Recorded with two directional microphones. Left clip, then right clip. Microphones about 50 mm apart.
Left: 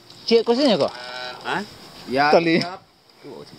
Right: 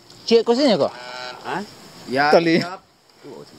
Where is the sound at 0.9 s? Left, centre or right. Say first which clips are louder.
Even; right.